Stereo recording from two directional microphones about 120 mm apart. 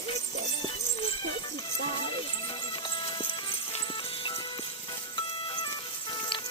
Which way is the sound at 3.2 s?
45° left (ahead or behind).